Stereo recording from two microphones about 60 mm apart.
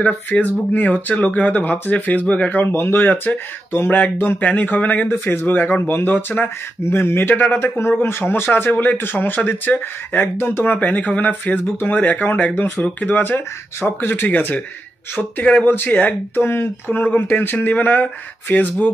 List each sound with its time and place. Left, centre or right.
0.0 s speech: left
2.7 s speech: left
4.4 s speech: left
13.7 s speech: left
15.6 s speech: left
16.3 s speech: left
17.0 s speech: left